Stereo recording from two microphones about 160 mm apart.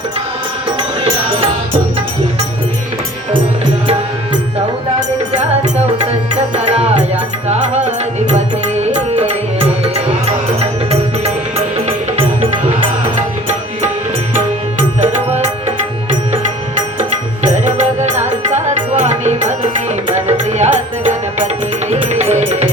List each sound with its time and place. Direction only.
5.3 s music: 45° right (ahead or behind)
13.1 s music: 45° right (ahead or behind)
17.0 s music: 50° right (ahead or behind)